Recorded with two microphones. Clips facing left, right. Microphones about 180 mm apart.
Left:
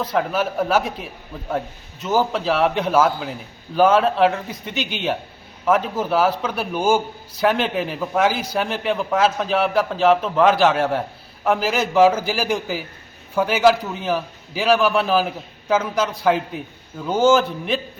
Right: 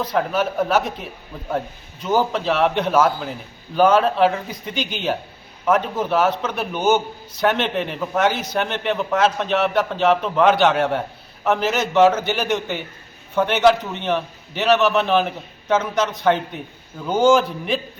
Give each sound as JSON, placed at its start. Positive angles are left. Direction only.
{"t": 0.1, "sound": "a man's voice", "side_deg": 5}